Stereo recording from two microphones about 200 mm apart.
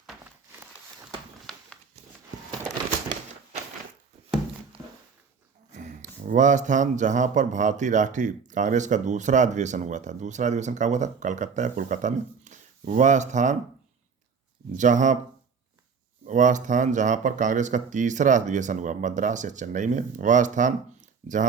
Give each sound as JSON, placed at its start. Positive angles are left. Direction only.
{"t": 5.7, "sound": "speech", "side_deg": -40}
{"t": 14.8, "sound": "speech", "side_deg": -40}
{"t": 16.2, "sound": "speech", "side_deg": -40}